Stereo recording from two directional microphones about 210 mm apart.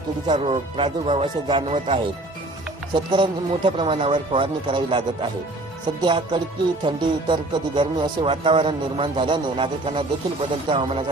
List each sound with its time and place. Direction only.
0.3 s speech: 30° right (ahead or behind)